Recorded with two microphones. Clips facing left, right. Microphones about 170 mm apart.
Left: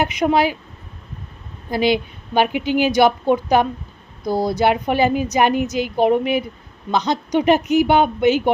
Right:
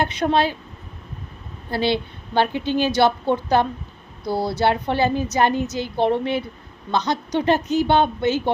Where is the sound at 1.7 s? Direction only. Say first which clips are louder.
Left 3 dB; 15° left (ahead or behind).